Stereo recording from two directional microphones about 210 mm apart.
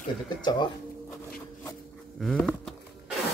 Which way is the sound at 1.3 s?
Centre (ahead or behind).